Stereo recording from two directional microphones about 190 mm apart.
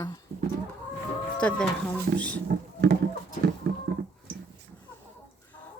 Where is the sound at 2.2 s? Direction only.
5° left (ahead or behind).